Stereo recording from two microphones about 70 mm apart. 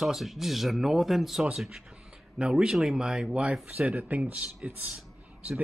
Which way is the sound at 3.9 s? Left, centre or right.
Right.